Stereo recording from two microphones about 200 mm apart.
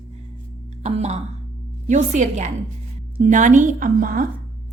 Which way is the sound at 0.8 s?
35° right (ahead or behind).